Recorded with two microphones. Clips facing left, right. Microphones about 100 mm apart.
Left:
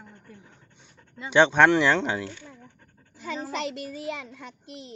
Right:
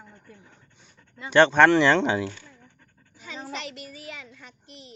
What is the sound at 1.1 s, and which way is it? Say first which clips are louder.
Speech: right 2 dB; 15° left (ahead or behind).